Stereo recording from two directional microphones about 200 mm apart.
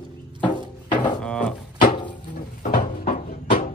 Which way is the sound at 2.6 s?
45° left (ahead or behind).